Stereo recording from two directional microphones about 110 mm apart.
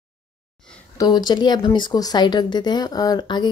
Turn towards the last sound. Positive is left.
turn(degrees=40)  # may be behind; listen again after turning